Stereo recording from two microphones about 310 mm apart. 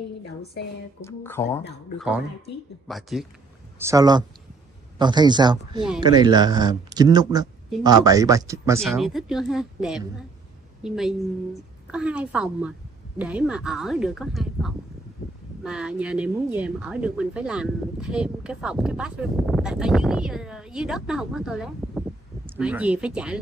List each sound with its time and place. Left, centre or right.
1.0 s a woman's voice: centre